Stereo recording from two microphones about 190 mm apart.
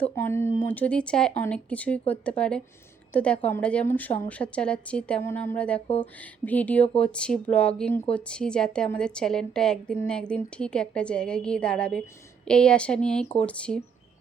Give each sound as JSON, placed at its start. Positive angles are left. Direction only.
{"t": 0.0, "sound": "a woman's voice", "side_deg": 10}